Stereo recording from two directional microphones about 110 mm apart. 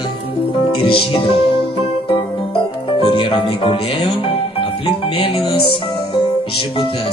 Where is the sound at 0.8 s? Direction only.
55° left (ahead or behind).